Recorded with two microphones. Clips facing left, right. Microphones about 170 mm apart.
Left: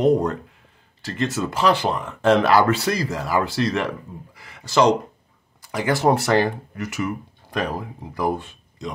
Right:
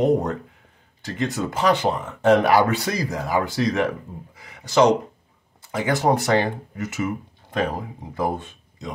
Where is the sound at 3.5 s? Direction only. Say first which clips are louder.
Even; 70° left (ahead or behind).